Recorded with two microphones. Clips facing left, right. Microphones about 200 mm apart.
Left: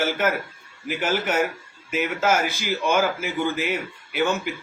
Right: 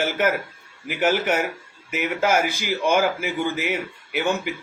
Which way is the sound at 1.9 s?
10° right (ahead or behind).